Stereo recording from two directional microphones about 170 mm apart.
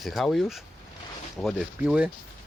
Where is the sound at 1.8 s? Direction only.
5° right (ahead or behind).